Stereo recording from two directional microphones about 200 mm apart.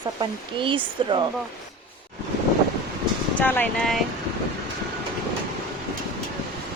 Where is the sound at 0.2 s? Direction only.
25° right (ahead or behind).